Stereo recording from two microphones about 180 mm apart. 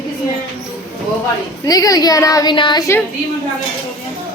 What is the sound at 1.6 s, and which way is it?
A woman's voice, 20° left (ahead or behind).